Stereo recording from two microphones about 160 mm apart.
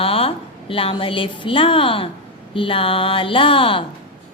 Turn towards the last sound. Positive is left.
turn(degrees=35)  # may be behind; listen again after turning